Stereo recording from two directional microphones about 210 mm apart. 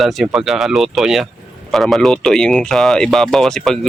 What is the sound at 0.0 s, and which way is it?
Speech, centre (ahead or behind).